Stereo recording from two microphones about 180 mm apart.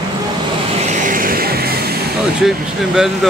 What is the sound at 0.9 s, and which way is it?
Music, 45° right (ahead or behind).